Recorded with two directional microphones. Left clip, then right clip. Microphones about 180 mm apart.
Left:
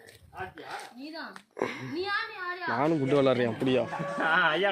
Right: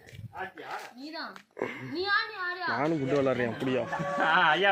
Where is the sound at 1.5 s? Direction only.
20° left (ahead or behind); by 3.8 s 35° left (ahead or behind).